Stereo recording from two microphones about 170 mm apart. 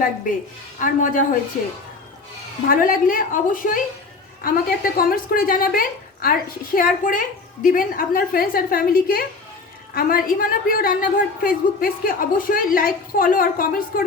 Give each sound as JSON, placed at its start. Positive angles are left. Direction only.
{"t": 0.8, "sound": "a woman's voice", "side_deg": 50}
{"t": 2.6, "sound": "a woman's voice", "side_deg": 55}